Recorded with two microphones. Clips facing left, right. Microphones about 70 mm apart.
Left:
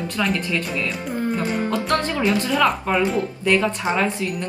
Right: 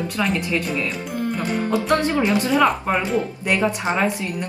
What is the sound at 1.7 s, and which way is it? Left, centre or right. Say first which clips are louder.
Speech: right 2 dB; centre.